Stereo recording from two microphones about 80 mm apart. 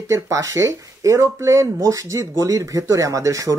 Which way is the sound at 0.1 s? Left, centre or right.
Right.